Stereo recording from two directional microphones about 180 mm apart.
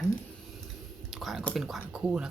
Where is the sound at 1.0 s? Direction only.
Centre (ahead or behind).